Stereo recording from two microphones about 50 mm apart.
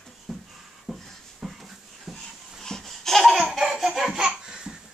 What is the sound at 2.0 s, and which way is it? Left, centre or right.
Babbling, centre.